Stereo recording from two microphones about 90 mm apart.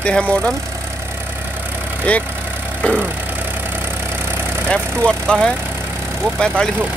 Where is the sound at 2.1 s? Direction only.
15° left (ahead or behind).